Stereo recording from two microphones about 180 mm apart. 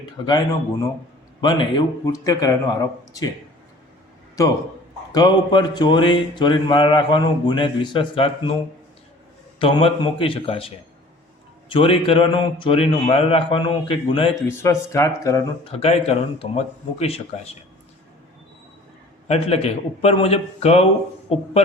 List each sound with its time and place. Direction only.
0.3 s speech: 25° left (ahead or behind)
4.4 s speech: 20° left (ahead or behind)
9.6 s speech: 30° left (ahead or behind)
11.7 s speech: 30° left (ahead or behind)
14.4 s speech: 15° left (ahead or behind)
15.6 s speech: 35° left (ahead or behind)
19.3 s speech: 35° left (ahead or behind)